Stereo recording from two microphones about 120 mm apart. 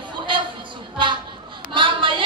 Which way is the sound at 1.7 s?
45° right (ahead or behind).